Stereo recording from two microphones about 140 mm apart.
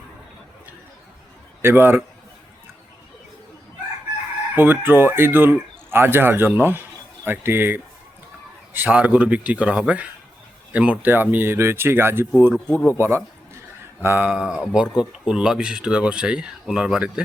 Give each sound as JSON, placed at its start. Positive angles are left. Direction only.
{"t": 1.6, "sound": "speech", "side_deg": -15}
{"t": 4.5, "sound": "speech", "side_deg": -15}
{"t": 12.5, "sound": "speech", "side_deg": 5}
{"t": 13.0, "sound": "a sound", "side_deg": -20}
{"t": 14.0, "sound": "speech", "side_deg": -15}